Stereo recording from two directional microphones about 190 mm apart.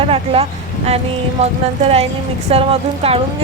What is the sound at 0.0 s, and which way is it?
Speech, 30° right (ahead or behind).